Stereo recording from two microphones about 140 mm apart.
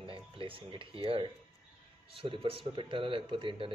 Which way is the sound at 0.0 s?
40° right (ahead or behind).